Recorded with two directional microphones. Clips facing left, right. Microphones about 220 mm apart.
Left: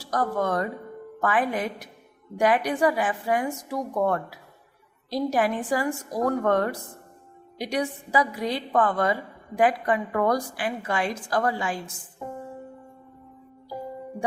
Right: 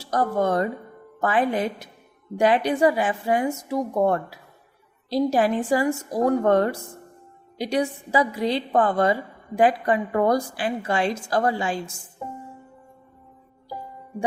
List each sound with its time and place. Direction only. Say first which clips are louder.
0.0 s a woman's voice: right 3 dB; 25° right (ahead or behind)